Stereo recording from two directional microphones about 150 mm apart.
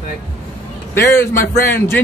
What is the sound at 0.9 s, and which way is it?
Speech, 15° left (ahead or behind).